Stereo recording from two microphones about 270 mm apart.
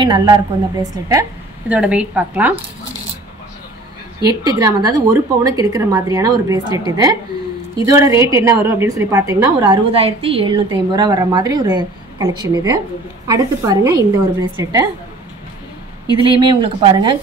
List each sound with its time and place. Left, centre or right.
0.0 s a woman's voice: centre
4.2 s a woman's voice: centre
7.8 s a woman's voice: centre
16.3 s a woman's voice: centre